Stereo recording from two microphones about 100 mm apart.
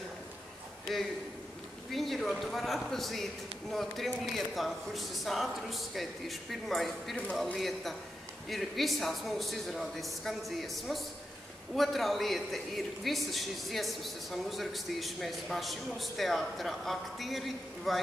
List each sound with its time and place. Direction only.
0.9 s a man's voice: centre (ahead or behind)